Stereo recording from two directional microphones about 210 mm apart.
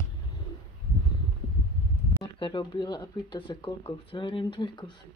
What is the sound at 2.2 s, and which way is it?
Speech, 20° left (ahead or behind).